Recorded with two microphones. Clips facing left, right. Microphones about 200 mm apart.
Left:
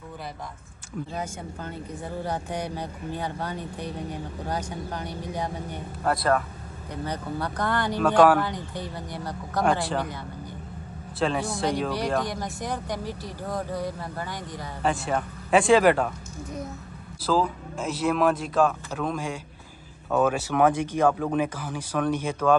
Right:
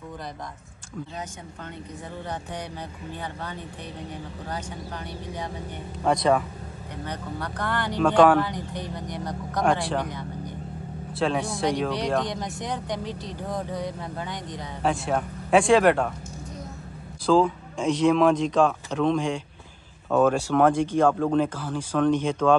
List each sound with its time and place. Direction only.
2.5 s speech: 10° left (ahead or behind)
3.2 s speech: 35° left (ahead or behind)
6.0 s speech: 5° left (ahead or behind)
7.1 s speech: 30° left (ahead or behind)
7.5 s speech: 15° left (ahead or behind)
13.0 s speech: 20° right (ahead or behind)
13.5 s speech: 5° left (ahead or behind)
17.3 s speech: 5° left (ahead or behind)